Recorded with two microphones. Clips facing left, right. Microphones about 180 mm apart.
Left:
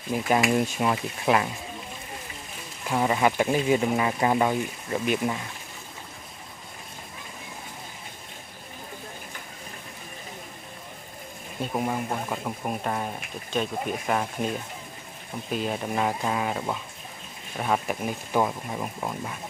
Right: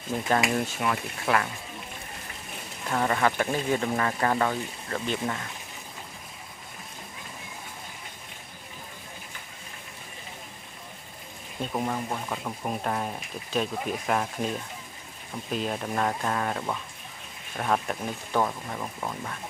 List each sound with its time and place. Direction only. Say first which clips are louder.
0.1 s speech: left 3 dB; 15° left (ahead or behind)
2.9 s speech: left 2 dB; 10° left (ahead or behind)
11.6 s speech: left 2 dB; 5° left (ahead or behind)
15.5 s speech: left 1 dB; 5° left (ahead or behind)